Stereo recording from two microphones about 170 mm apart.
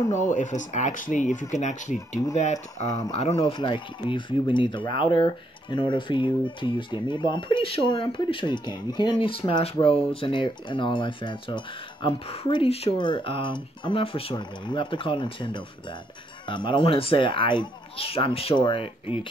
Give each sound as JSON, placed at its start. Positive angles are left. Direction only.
{"t": 0.1, "sound": "speech", "side_deg": 45}
{"t": 3.3, "sound": "speech", "side_deg": 25}